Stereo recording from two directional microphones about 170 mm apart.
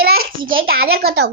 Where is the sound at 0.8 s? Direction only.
65° right (ahead or behind).